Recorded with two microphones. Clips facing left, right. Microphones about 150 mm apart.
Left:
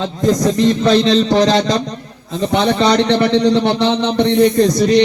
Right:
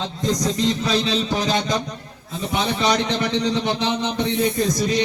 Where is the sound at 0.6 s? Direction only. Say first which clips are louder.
Left 11 dB; 75° left (ahead or behind).